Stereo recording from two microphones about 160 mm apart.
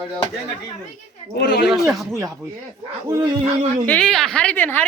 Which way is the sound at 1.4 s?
90° left.